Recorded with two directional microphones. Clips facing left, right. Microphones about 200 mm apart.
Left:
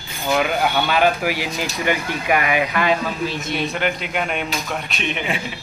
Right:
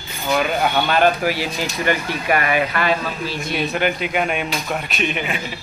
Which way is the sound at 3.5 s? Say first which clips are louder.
Right 4 dB; 5° right (ahead or behind).